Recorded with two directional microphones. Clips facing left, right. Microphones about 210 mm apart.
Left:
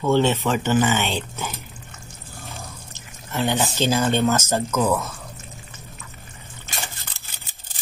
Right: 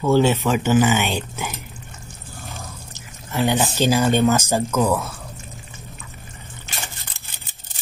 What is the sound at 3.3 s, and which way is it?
Speech, 15° right (ahead or behind).